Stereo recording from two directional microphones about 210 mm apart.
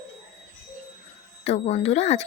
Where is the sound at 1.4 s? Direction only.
30° left (ahead or behind).